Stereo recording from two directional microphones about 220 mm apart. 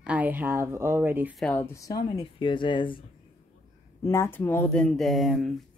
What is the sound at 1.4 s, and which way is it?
Speech, 10° left (ahead or behind).